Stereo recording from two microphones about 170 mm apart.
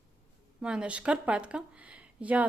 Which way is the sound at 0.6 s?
5° right (ahead or behind).